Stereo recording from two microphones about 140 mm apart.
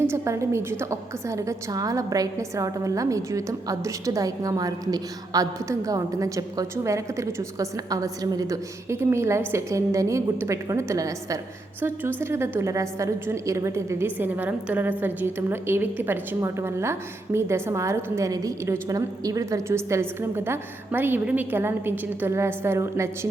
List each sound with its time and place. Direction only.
0.1 s a woman's voice: 20° right (ahead or behind)